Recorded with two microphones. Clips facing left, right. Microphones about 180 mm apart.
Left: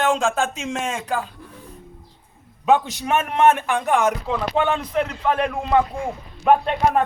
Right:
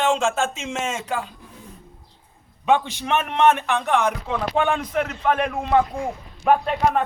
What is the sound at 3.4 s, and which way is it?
Speech, 50° left (ahead or behind).